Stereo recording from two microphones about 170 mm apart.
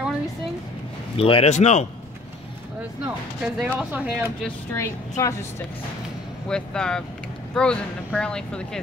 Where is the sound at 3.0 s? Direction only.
5° right (ahead or behind).